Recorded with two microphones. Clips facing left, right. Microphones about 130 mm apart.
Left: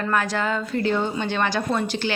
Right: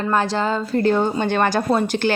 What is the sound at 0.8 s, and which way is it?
A woman's voice, 45° right (ahead or behind).